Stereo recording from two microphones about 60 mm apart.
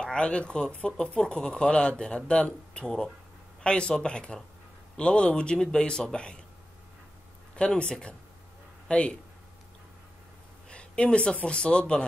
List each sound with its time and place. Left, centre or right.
0.0 s speech: centre
7.5 s speech: centre
10.7 s a sound: centre
11.4 s speech: centre